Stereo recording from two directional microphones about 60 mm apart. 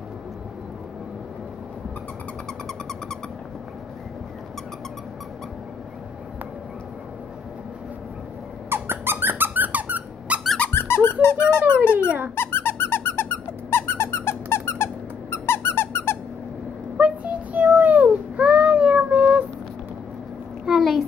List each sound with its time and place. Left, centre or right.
8.6 s squeak: right
10.7 s squeak: left
16.9 s baby cry: right
20.6 s a sound: centre